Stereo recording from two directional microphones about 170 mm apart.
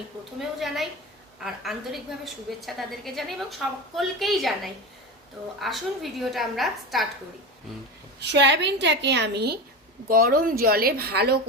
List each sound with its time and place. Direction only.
0.3 s a woman's voice: centre (ahead or behind)
8.2 s a woman's voice: 90° right; by 9.6 s 75° right (ahead or behind)
10.1 s speech: 55° right (ahead or behind)